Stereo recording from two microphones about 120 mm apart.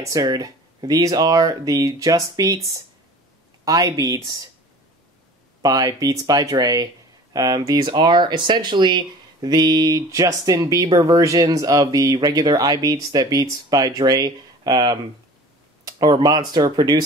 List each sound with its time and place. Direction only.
0.0 s speech: 30° right (ahead or behind)
5.6 s speech: 35° right (ahead or behind)